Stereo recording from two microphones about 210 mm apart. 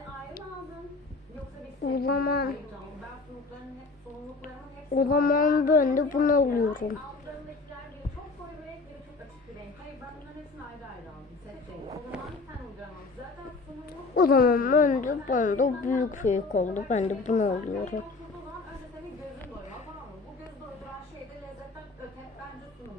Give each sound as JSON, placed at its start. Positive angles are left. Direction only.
{"t": 1.8, "sound": "speech", "side_deg": 45}
{"t": 4.9, "sound": "a woman's voice", "side_deg": 45}
{"t": 12.1, "sound": "a sound", "side_deg": -5}
{"t": 14.2, "sound": "a woman's voice", "side_deg": 45}